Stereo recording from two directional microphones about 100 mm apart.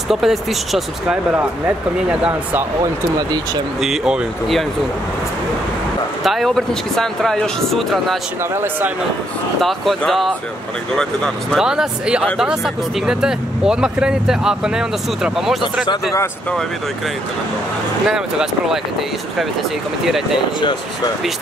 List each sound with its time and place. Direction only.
0.1 s speech: centre (ahead or behind)
2.0 s speech: 10° right (ahead or behind)
2.8 s speech: 40° right (ahead or behind)
3.8 s speech: 5° right (ahead or behind)
6.2 s speech: centre (ahead or behind)
9.6 s speech: centre (ahead or behind)
11.5 s speech: 5° right (ahead or behind)
18.0 s speech: 5° right (ahead or behind)